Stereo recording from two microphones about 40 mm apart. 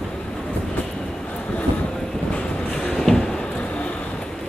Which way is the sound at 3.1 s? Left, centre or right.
Centre.